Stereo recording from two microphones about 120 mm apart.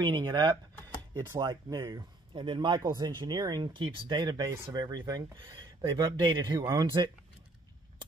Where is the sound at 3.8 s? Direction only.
40° right (ahead or behind).